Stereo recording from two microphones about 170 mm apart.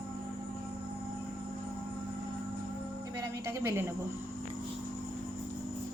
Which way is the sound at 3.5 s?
15° right (ahead or behind).